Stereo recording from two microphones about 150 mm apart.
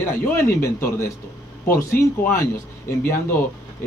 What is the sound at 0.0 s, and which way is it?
Speech, 15° left (ahead or behind).